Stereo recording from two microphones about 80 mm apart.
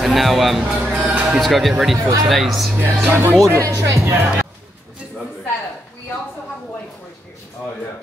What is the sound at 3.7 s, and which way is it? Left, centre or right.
Speech, right.